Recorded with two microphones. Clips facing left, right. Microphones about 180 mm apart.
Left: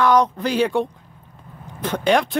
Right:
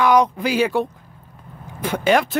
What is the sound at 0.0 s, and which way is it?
Speech, 10° right (ahead or behind).